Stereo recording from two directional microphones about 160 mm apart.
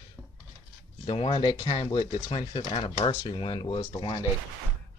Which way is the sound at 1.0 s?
35° left (ahead or behind).